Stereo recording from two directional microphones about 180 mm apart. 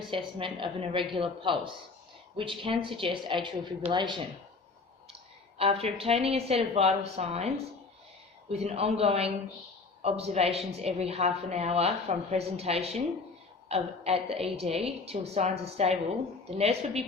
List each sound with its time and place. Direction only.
0.1 s a woman's voice: 30° right (ahead or behind)
5.5 s a woman's voice: 35° right (ahead or behind)